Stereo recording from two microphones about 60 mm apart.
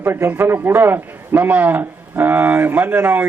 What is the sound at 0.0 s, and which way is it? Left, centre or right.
A man's voice, right.